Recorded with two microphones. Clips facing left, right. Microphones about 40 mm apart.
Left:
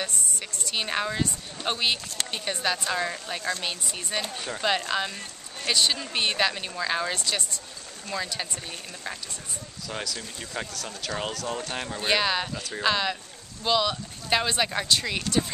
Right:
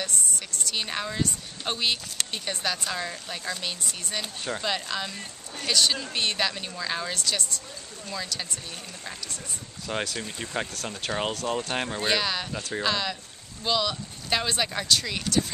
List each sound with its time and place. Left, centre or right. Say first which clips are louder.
0.0 s a woman's voice: even; centre
9.8 s speech: right 4 dB; right
12.1 s a woman's voice: left 4 dB; centre